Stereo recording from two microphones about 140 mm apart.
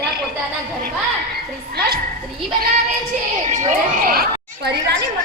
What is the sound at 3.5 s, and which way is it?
Speech, 60° right (ahead or behind).